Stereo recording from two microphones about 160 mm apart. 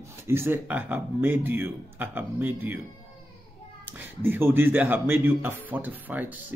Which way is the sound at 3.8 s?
10° right (ahead or behind).